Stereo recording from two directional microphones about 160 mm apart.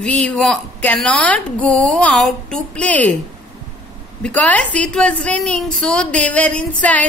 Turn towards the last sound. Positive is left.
turn(degrees=10)  # may be behind; listen again after turning